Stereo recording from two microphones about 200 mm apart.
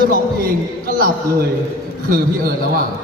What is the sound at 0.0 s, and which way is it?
A man's voice, 45° right (ahead or behind).